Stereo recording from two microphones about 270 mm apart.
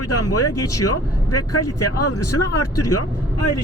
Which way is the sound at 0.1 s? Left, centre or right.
Left.